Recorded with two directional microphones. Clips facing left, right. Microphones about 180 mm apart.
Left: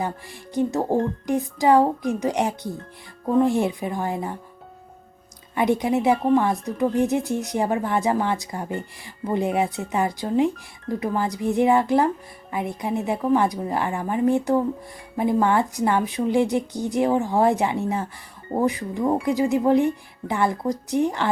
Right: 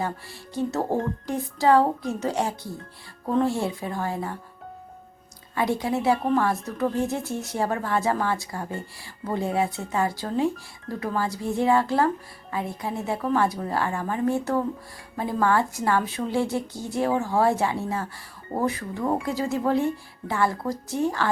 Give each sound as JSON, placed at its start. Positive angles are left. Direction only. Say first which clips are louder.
{"t": 0.0, "sound": "speech", "louder": "left 2 dB", "side_deg": 15}
{"t": 5.5, "sound": "speech", "louder": "left 4 dB", "side_deg": 20}